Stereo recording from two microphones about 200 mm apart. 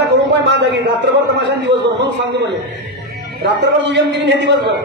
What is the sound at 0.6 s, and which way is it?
A man's voice, 60° right (ahead or behind).